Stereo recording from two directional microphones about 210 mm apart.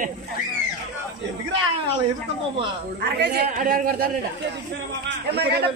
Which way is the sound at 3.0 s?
50° right (ahead or behind).